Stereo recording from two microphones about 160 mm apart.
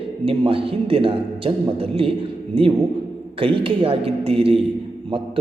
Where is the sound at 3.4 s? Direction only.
35° right (ahead or behind).